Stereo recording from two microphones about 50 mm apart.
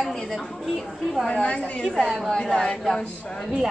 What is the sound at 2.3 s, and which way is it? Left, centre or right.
Speech, centre.